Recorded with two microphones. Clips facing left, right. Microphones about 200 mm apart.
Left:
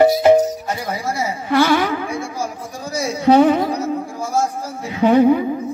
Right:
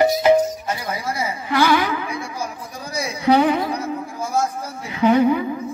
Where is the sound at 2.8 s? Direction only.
50° left (ahead or behind).